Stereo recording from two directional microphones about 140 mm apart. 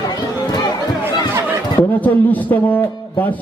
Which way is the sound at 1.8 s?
10° left (ahead or behind).